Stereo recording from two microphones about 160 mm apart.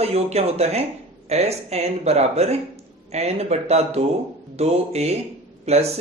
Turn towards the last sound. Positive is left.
turn(degrees=-40)  # may be behind; listen again after turning